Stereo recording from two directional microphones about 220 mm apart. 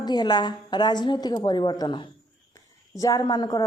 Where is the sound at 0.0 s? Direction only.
20° left (ahead or behind).